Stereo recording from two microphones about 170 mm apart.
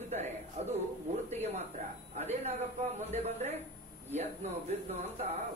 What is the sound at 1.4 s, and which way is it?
A man's voice, 40° right (ahead or behind).